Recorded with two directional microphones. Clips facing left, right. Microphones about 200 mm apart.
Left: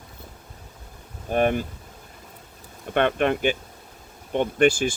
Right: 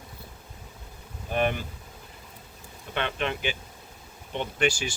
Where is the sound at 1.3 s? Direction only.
45° left (ahead or behind).